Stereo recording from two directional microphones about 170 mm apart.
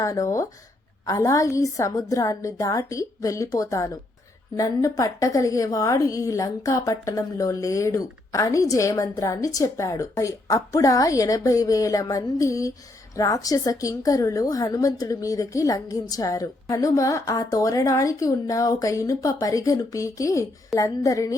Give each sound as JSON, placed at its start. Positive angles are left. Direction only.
{"t": 0.0, "sound": "a woman's voice", "side_deg": 20}